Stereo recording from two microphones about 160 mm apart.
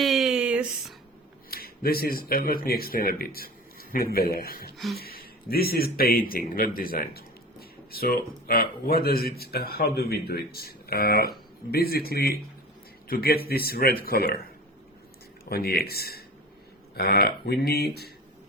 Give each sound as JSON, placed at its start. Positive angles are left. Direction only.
{"t": 0.0, "sound": "a sound", "side_deg": 0}
{"t": 1.5, "sound": "speech", "side_deg": 70}
{"t": 15.4, "sound": "speech", "side_deg": 75}